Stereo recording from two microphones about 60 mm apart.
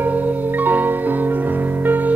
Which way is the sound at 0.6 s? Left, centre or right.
Right.